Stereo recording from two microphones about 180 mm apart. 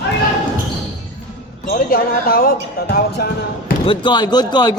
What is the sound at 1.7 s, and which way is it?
Speech, 55° left (ahead or behind).